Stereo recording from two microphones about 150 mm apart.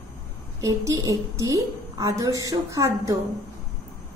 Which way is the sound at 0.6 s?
25° right (ahead or behind).